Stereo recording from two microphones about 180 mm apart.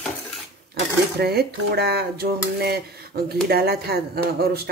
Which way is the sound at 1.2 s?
65° right (ahead or behind).